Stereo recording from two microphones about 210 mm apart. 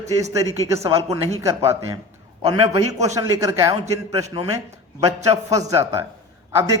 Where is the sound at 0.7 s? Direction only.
15° right (ahead or behind).